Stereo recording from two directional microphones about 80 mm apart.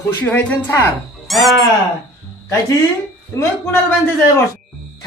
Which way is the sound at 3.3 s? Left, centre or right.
Left.